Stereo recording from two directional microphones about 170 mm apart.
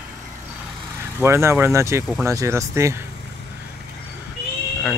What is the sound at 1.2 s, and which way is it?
Speech, 15° right (ahead or behind).